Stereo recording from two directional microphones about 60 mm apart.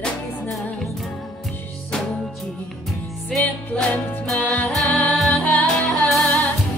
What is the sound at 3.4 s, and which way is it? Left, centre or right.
Music, left.